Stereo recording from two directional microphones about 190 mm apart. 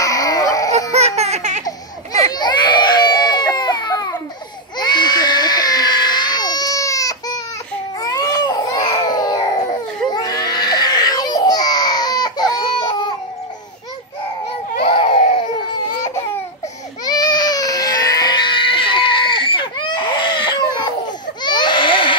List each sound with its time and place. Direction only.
0.0 s fowl: 20° left (ahead or behind)
0.9 s baby laughter: 35° right (ahead or behind)
2.3 s baby cry: 20° left (ahead or behind)
14.9 s baby cry: 30° left (ahead or behind)
17.0 s baby cry: 20° left (ahead or behind)